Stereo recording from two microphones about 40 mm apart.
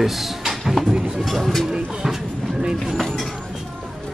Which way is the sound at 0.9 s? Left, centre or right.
Centre.